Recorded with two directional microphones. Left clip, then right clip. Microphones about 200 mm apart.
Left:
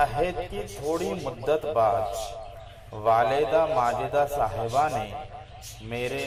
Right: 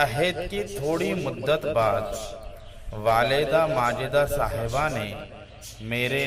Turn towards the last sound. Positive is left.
turn(degrees=-35)  # may be behind; listen again after turning